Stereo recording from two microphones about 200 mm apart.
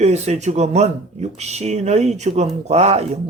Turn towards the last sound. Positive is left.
turn(degrees=-30)  # may be behind; listen again after turning